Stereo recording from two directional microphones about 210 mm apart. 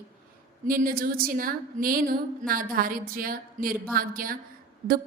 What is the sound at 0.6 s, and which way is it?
A woman's voice, 40° right (ahead or behind).